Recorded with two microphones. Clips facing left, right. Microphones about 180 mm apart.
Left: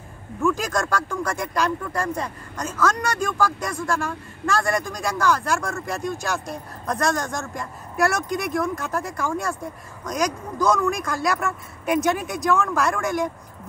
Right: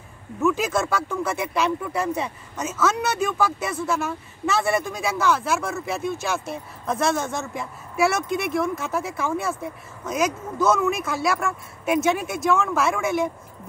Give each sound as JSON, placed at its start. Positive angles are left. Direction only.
{"t": 0.4, "sound": "speech", "side_deg": -5}